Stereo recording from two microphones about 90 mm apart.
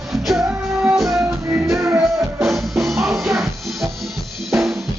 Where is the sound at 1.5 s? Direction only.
35° right (ahead or behind).